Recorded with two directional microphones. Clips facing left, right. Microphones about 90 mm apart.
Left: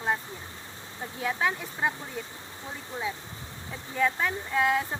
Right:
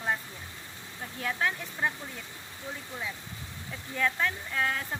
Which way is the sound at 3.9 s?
10° left (ahead or behind).